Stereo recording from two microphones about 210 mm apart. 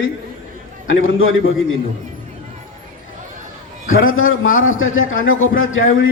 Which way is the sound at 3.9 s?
70° left (ahead or behind).